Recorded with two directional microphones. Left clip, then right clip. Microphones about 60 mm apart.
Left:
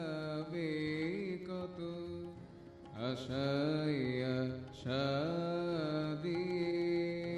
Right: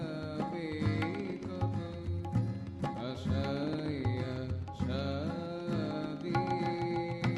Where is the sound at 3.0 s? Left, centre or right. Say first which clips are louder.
Even; right.